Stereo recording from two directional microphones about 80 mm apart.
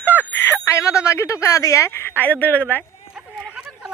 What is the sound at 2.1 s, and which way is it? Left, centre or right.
Speech, left.